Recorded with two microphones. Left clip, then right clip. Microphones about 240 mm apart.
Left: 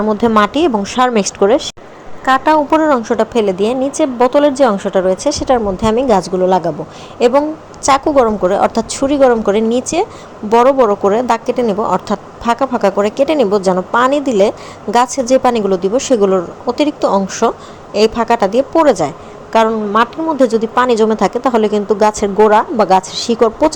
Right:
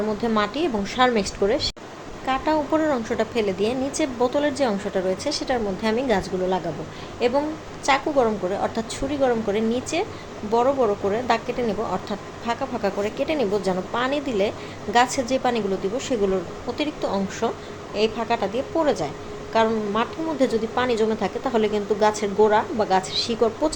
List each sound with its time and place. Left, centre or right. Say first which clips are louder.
0.1 s a woman's voice: left 12 dB; left